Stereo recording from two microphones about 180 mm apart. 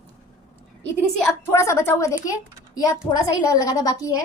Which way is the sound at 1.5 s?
15° left (ahead or behind).